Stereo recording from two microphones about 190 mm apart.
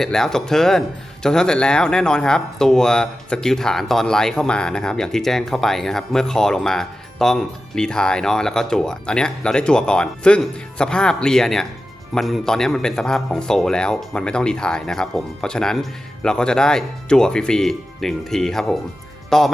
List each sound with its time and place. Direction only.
0.0 s speech: centre (ahead or behind)